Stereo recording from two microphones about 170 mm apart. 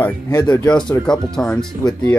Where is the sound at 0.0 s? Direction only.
20° left (ahead or behind).